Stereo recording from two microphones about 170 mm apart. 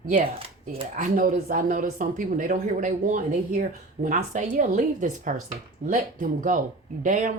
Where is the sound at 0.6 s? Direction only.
50° right (ahead or behind).